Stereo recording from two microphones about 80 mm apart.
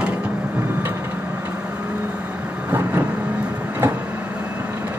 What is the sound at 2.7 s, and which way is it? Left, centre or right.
Vehicle, right.